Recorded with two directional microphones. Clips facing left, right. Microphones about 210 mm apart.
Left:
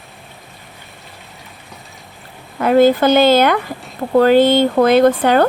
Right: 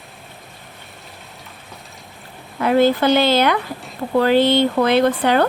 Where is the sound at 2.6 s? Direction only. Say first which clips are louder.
Left 4 dB; 45° left (ahead or behind).